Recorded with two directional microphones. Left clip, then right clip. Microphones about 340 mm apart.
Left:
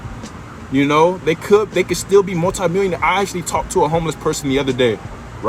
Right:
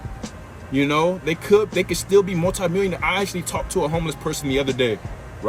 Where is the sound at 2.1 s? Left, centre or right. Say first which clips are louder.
Left 3 dB; centre.